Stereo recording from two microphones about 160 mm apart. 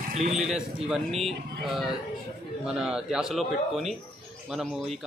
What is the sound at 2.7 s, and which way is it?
A man's voice, 5° right (ahead or behind).